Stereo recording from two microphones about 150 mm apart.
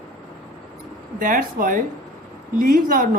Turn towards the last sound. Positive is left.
turn(degrees=-70)  # may be behind; listen again after turning